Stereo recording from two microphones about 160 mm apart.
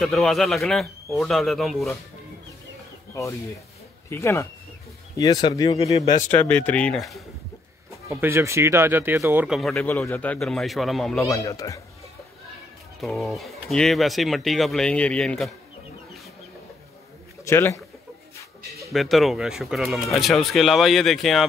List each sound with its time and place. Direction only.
0.0 s speech: centre (ahead or behind)
3.1 s speech: 20° left (ahead or behind); by 7.2 s centre (ahead or behind)
8.1 s speech: 15° right (ahead or behind)
9.5 s speech: centre (ahead or behind)
9.8 s speech: 15° left (ahead or behind)
11.1 s speech: 20° left (ahead or behind)
13.0 s speech: centre (ahead or behind)
17.5 s speech: 20° left (ahead or behind)
18.9 s speech: centre (ahead or behind)